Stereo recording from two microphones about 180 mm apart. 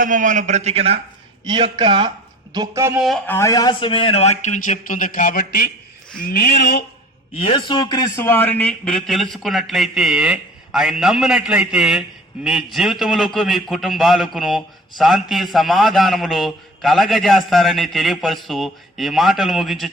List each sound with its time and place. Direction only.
0.0 s a man's voice: 45° right (ahead or behind); by 3.0 s 15° right (ahead or behind)
3.2 s a man's voice: 15° left (ahead or behind); by 5.7 s 50° left (ahead or behind)
6.2 s a sound: 50° left (ahead or behind)
7.3 s a man's voice: 30° left (ahead or behind); by 19.9 s centre (ahead or behind)